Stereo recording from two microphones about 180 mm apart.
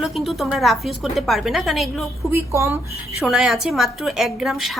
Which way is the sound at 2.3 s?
15° right (ahead or behind).